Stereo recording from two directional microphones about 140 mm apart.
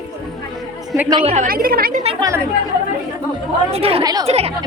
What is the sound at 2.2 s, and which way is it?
Speech, 25° right (ahead or behind).